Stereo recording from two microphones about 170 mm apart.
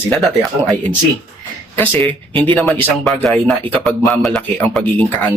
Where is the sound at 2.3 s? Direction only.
25° right (ahead or behind).